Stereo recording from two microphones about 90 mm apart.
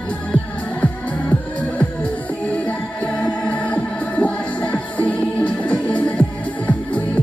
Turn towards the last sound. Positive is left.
turn(degrees=15)  # may be behind; listen again after turning